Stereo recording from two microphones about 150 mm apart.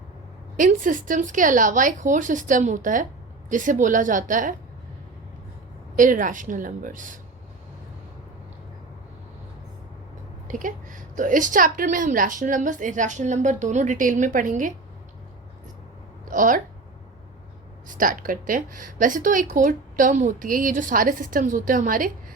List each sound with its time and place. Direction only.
0.5 s a woman's voice: 60° right (ahead or behind)
6.0 s a woman's voice: 60° right (ahead or behind)
10.5 s a woman's voice: 60° right (ahead or behind)
16.3 s speech: 60° right (ahead or behind)
17.8 s a woman's voice: 65° right (ahead or behind)